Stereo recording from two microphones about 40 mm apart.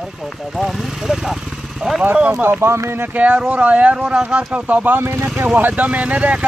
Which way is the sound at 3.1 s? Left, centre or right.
Right.